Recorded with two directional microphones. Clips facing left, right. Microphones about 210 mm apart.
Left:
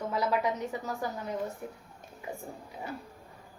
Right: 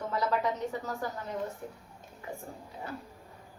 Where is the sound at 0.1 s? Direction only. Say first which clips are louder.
Left 1 dB; 10° left (ahead or behind).